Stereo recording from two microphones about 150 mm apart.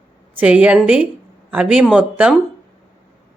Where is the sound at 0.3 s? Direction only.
10° right (ahead or behind).